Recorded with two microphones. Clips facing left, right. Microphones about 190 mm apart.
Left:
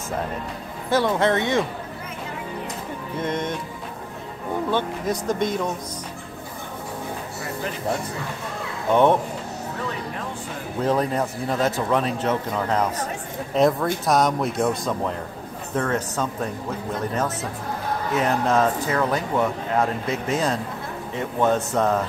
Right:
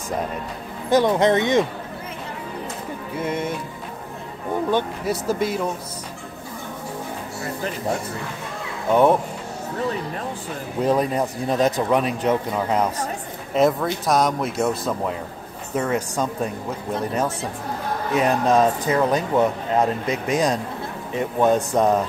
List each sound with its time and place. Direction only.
0.8 s speech: 20° right (ahead or behind)
3.2 s speech: 10° right (ahead or behind)
4.6 s speech: 10° right (ahead or behind)
10.8 s speech: 10° right (ahead or behind)
18.1 s speech: 15° right (ahead or behind)